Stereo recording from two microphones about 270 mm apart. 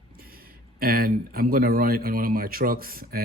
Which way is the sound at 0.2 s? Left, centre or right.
Right.